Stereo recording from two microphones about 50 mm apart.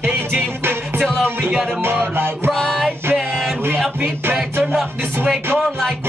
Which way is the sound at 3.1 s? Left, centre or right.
Centre.